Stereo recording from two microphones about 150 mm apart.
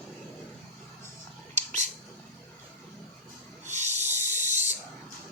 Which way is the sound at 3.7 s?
50° right (ahead or behind).